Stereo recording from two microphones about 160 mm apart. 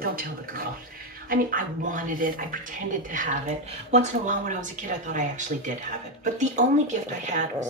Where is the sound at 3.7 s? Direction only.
45° right (ahead or behind).